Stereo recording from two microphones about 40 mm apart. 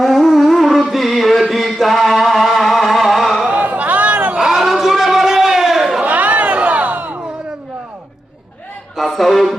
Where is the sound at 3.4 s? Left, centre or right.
Right.